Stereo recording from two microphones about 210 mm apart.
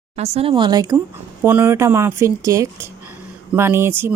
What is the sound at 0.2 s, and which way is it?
Speech, 25° right (ahead or behind).